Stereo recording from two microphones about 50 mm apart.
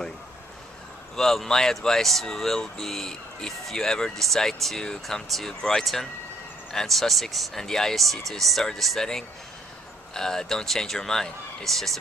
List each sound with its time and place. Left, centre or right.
1.1 s speech: centre
5.6 s speech: centre
6.7 s speech: centre